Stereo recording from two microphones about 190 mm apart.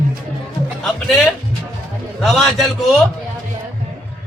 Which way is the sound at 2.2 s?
Centre (ahead or behind).